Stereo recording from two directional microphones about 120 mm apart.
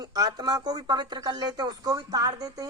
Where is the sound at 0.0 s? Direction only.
35° right (ahead or behind).